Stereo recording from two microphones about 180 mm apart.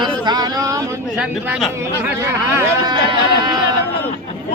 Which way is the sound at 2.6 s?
20° right (ahead or behind).